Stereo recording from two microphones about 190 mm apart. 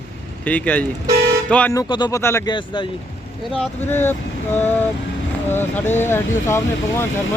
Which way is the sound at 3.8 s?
10° left (ahead or behind).